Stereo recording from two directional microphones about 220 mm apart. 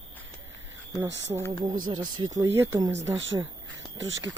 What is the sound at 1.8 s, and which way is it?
Speech, 20° right (ahead or behind).